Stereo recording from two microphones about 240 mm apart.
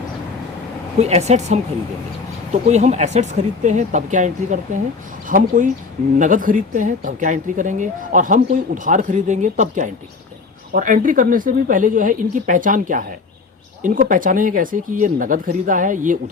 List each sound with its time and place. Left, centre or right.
0.9 s speech: right
2.6 s speech: right